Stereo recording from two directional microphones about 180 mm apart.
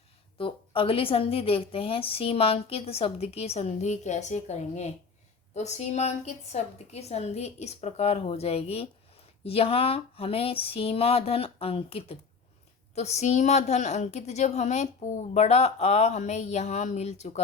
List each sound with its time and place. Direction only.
0.3 s a woman's voice: 30° left (ahead or behind)